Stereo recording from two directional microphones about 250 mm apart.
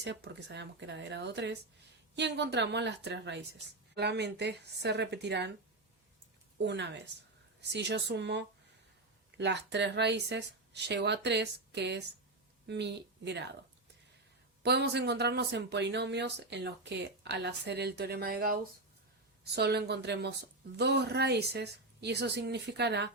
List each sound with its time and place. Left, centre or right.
0.0 s speech: right
6.6 s speech: right
14.6 s speech: right